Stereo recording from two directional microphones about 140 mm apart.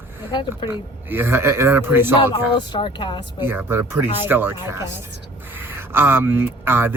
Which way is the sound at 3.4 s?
15° right (ahead or behind).